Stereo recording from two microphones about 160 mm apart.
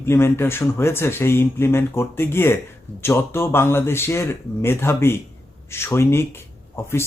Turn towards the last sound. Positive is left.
turn(degrees=15)  # may be behind; listen again after turning